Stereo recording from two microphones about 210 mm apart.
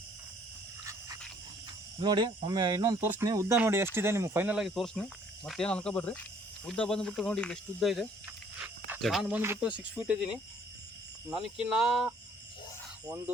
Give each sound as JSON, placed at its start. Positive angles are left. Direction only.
{"t": 0.9, "sound": "a sound", "side_deg": -15}
{"t": 2.0, "sound": "speech", "side_deg": -20}
{"t": 11.3, "sound": "speech", "side_deg": -5}